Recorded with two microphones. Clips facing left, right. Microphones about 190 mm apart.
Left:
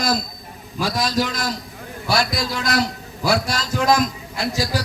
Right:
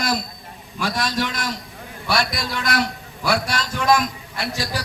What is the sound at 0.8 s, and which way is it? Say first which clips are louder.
A man's voice: left 2 dB; 40° left (ahead or behind).